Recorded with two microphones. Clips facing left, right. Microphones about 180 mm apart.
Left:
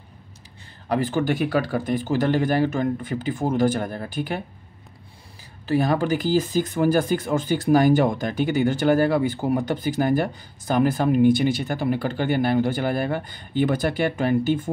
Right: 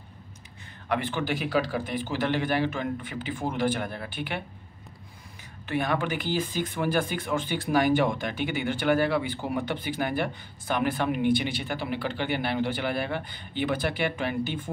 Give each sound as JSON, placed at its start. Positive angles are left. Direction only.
{"t": 0.8, "sound": "speech", "side_deg": 40}
{"t": 5.7, "sound": "speech", "side_deg": 35}